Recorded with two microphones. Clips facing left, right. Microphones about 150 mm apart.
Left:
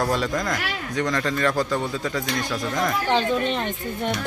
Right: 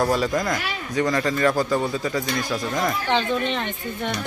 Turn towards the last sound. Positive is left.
turn(degrees=0)  # may be behind; listen again after turning